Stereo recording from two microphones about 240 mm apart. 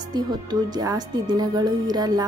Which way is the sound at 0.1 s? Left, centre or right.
Centre.